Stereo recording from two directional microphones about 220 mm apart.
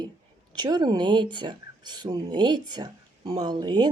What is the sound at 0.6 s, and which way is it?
Speech, 20° right (ahead or behind).